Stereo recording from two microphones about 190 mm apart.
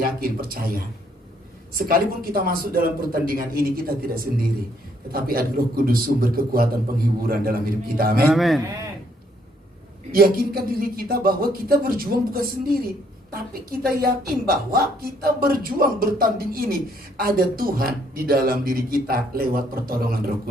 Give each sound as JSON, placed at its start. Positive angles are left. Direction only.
{"t": 0.0, "sound": "a man's voice", "side_deg": -50}
{"t": 8.3, "sound": "a man's voice", "side_deg": 0}
{"t": 10.1, "sound": "a man's voice", "side_deg": -50}